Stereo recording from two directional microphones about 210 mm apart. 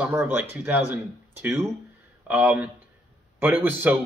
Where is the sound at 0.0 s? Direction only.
10° right (ahead or behind).